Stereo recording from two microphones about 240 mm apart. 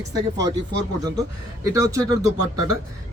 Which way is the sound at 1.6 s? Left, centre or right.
Centre.